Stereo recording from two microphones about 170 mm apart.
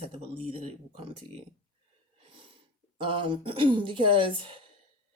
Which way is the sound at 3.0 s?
30° right (ahead or behind).